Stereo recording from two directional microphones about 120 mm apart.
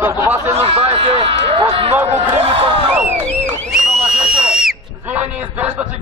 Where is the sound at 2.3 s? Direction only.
60° right (ahead or behind).